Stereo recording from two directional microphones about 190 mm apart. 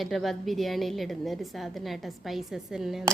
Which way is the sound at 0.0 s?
Centre (ahead or behind).